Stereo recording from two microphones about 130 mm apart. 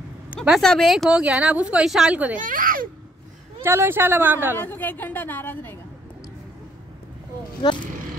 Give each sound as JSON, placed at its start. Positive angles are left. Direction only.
{"t": 0.4, "sound": "speech", "side_deg": 5}
{"t": 2.3, "sound": "a child's voice", "side_deg": -90}
{"t": 3.6, "sound": "speech", "side_deg": -20}
{"t": 4.6, "sound": "a woman's voice", "side_deg": 15}